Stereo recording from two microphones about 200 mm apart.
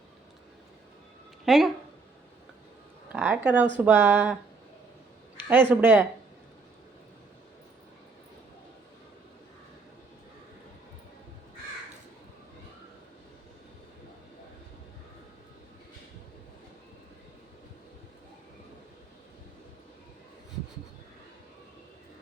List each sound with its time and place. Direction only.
1.5 s speech: centre (ahead or behind)
3.1 s speech: 10° right (ahead or behind)
5.5 s speech: 10° right (ahead or behind)